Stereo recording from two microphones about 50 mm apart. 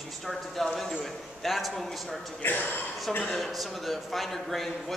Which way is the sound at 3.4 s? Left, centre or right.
Centre.